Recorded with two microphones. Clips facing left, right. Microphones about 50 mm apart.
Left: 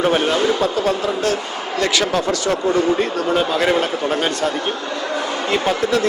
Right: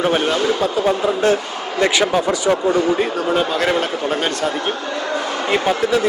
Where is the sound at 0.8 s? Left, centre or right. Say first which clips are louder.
Right 2 dB; centre.